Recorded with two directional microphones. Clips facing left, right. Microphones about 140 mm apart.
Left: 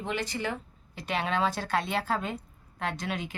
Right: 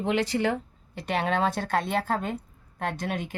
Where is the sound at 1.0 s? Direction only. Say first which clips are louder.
Right 3 dB; 55° right (ahead or behind).